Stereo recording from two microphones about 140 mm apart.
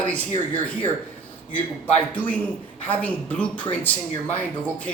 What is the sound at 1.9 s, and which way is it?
Speech, 10° left (ahead or behind).